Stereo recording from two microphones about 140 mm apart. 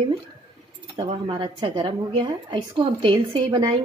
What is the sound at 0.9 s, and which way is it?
A woman's voice, 40° right (ahead or behind).